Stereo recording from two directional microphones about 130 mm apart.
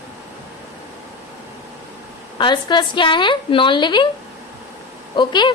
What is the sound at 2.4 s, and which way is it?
A woman's voice, 35° left (ahead or behind).